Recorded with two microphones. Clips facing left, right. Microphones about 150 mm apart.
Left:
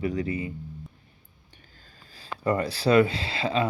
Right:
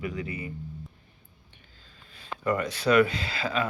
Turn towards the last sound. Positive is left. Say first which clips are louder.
# left 3 dB
turn(degrees=25)  # may be behind; listen again after turning